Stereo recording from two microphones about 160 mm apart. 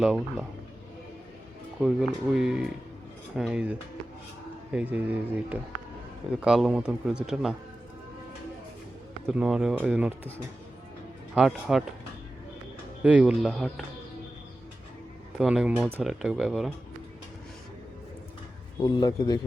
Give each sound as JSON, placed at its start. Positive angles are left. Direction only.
{"t": 0.0, "sound": "speech", "side_deg": -10}
{"t": 1.8, "sound": "a man's voice", "side_deg": -5}
{"t": 9.2, "sound": "a man's voice", "side_deg": -5}
{"t": 11.3, "sound": "a man's voice", "side_deg": 0}
{"t": 13.0, "sound": "a man's voice", "side_deg": -10}
{"t": 15.4, "sound": "a man's voice", "side_deg": -5}
{"t": 18.8, "sound": "a man's voice", "side_deg": 25}